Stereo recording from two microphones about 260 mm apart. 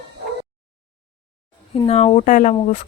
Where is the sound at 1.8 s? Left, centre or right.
Left.